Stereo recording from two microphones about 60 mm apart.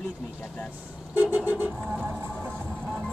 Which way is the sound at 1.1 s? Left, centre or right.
Right.